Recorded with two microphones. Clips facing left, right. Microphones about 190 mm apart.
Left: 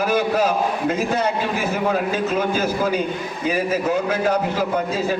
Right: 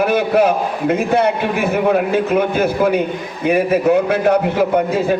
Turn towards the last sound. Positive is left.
turn(degrees=-60)  # may be behind; listen again after turning